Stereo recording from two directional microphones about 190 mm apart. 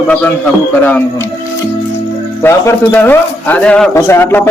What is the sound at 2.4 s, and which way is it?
A man's voice, 10° left (ahead or behind).